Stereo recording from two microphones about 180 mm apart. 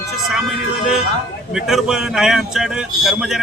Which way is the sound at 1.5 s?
Centre (ahead or behind).